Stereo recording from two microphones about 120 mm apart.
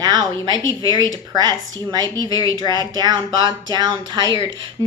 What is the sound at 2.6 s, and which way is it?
A woman's voice, 35° right (ahead or behind).